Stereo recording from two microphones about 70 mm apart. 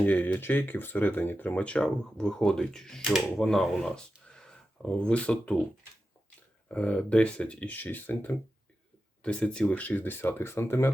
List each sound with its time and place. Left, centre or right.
0.0 s speech: left
6.7 s speech: centre; by 10.9 s left